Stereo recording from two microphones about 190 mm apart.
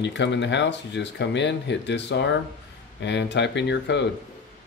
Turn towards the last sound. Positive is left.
turn(degrees=65)  # may be behind; listen again after turning